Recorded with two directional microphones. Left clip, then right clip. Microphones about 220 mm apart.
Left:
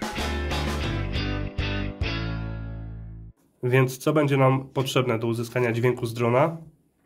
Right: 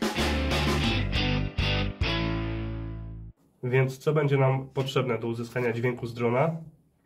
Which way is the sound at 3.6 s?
55° left (ahead or behind).